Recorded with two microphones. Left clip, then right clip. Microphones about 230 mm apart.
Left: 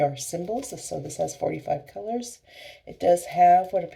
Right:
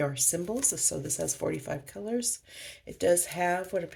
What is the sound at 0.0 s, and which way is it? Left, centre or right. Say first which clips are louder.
Speech: left 5 dB; right.